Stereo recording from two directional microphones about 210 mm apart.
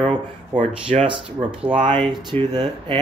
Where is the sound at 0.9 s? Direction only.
25° right (ahead or behind).